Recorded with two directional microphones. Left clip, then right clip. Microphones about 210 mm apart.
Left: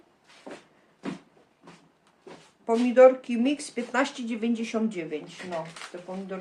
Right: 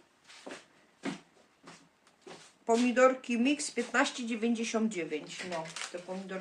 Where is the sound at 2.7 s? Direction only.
5° left (ahead or behind).